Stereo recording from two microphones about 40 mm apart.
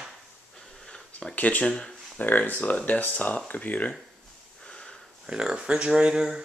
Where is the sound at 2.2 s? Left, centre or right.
Left.